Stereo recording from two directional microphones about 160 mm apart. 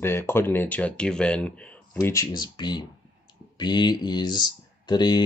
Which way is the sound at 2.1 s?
25° left (ahead or behind).